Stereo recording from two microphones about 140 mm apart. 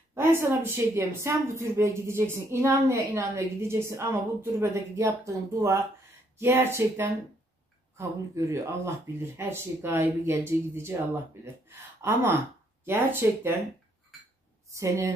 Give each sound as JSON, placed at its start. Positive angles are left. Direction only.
{"t": 0.1, "sound": "a woman's voice", "side_deg": -15}
{"t": 8.4, "sound": "speech", "side_deg": -20}
{"t": 12.0, "sound": "speech", "side_deg": -15}
{"t": 14.7, "sound": "a woman's voice", "side_deg": -20}